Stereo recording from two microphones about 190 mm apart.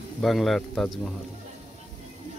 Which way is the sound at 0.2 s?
Centre (ahead or behind).